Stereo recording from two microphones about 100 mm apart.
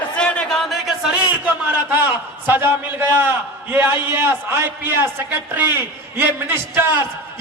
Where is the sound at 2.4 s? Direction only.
20° right (ahead or behind).